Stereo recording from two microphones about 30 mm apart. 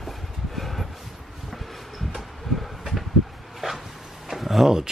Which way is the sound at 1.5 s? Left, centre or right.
Centre.